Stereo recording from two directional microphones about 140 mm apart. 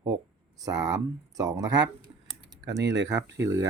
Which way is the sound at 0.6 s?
25° right (ahead or behind).